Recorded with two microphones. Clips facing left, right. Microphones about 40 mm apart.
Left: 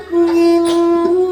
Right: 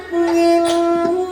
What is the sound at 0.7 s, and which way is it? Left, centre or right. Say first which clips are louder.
Wind instrument: left 3 dB; centre.